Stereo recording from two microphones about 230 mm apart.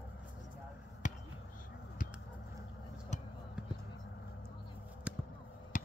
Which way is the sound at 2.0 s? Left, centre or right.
Left.